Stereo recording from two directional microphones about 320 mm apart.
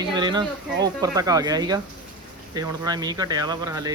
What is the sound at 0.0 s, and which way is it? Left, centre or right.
Speech, centre.